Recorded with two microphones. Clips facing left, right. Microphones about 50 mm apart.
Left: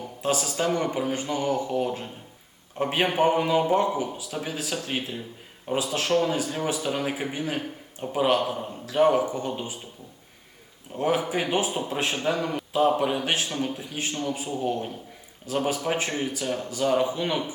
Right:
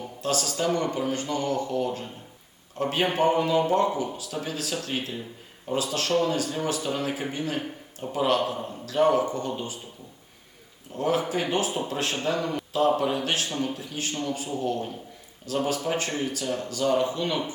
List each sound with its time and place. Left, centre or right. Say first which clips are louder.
0.2 s a man's voice: left 1 dB; centre
10.9 s a man's voice: left 1 dB; centre